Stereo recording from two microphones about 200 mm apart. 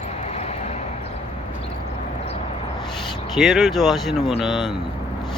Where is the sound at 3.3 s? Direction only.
Centre (ahead or behind).